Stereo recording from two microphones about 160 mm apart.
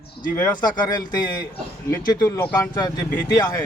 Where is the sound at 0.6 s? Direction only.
25° left (ahead or behind).